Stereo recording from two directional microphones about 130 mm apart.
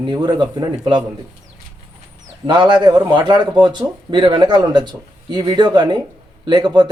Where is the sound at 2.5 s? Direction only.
35° right (ahead or behind).